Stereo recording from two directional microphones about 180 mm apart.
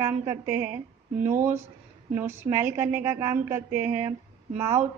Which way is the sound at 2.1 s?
15° right (ahead or behind).